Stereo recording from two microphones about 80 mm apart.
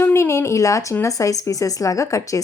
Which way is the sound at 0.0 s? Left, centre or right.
Left.